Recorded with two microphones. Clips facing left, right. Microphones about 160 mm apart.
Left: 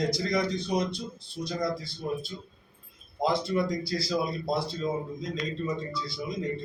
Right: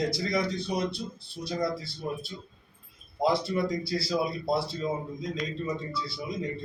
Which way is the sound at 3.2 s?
5° right (ahead or behind).